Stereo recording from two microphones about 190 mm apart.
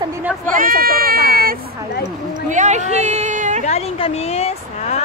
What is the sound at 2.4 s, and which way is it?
Speech, 40° right (ahead or behind).